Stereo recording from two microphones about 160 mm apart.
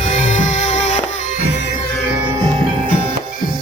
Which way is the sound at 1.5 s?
90° left.